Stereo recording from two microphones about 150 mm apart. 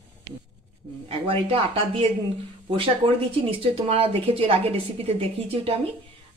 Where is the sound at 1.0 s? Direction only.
40° right (ahead or behind).